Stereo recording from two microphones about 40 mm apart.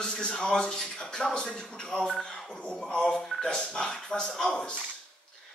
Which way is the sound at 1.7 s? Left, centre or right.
Centre.